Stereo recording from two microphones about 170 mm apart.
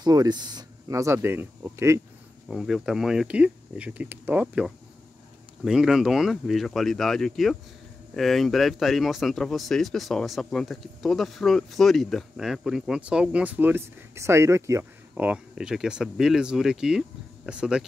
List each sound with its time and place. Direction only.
0.0 s speech: 25° right (ahead or behind)
2.4 s speech: centre (ahead or behind)